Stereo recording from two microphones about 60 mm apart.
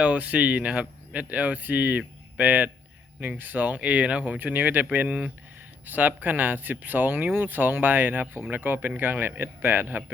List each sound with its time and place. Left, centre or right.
0.0 s speech: right
4.4 s speech: right